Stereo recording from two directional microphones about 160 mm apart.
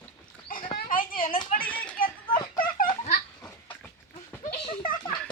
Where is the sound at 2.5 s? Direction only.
60° left (ahead or behind).